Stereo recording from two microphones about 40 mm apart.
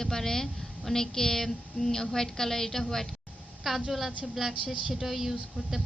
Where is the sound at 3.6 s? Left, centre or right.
Centre.